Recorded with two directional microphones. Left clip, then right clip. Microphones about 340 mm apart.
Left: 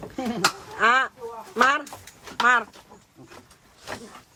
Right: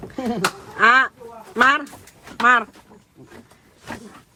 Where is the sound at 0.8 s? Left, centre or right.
Right.